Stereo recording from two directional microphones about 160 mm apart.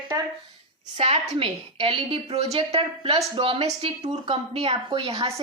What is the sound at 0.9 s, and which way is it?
A woman's voice, 40° right (ahead or behind).